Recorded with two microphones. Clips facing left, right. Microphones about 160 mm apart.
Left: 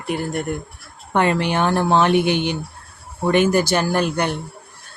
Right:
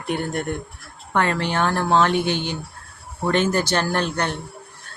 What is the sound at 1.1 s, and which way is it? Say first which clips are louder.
Speech: left 3 dB; 15° left (ahead or behind).